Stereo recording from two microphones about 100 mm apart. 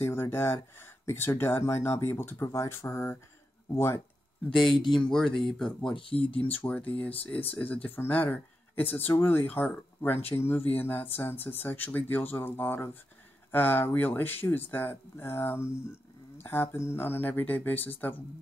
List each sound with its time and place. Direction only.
0.0 s speech: 25° left (ahead or behind)
4.5 s speech: centre (ahead or behind)
5.9 s speech: 60° left (ahead or behind)
6.3 s speech: 15° left (ahead or behind)